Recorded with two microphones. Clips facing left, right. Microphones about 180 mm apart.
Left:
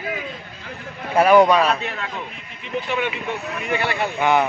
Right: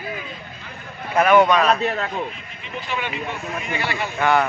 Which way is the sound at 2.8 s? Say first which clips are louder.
Left 4 dB; 60° left (ahead or behind).